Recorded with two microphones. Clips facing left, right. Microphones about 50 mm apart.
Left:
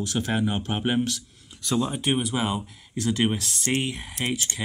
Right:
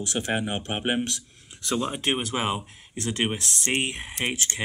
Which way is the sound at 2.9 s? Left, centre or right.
Right.